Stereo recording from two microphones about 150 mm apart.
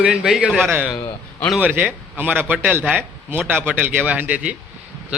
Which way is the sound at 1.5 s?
10° right (ahead or behind).